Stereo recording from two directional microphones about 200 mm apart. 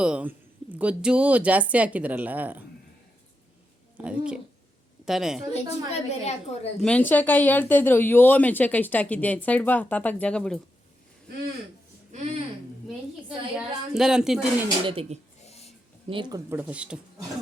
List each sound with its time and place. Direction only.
0.0 s speech: 5° right (ahead or behind)
3.9 s a woman's voice: 5° right (ahead or behind)
5.5 s a woman's voice: 35° left (ahead or behind)
6.8 s speech: 10° left (ahead or behind)
13.2 s a woman's voice: centre (ahead or behind)
14.8 s speech: 30° right (ahead or behind)
15.4 s wheeze: 30° left (ahead or behind)
16.0 s speech: 25° right (ahead or behind)
16.5 s a woman's voice: 10° right (ahead or behind)